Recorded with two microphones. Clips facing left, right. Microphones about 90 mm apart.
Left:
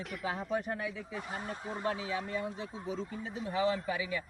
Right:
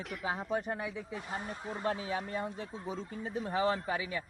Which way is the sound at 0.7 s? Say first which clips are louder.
Even; 20° right (ahead or behind).